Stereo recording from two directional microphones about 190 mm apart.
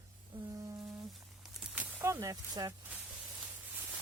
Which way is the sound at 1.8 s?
15° right (ahead or behind).